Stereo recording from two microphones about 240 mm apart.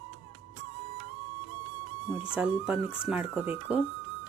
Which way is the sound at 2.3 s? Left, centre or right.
Centre.